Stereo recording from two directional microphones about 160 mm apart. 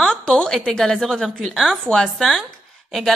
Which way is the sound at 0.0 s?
5° left (ahead or behind).